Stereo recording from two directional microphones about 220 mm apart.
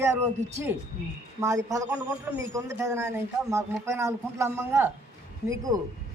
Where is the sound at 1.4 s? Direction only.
15° right (ahead or behind).